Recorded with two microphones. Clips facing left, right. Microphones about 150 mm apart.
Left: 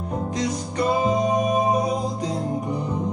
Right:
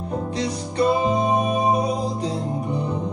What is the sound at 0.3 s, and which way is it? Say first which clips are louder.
Music: even; 35° right (ahead or behind).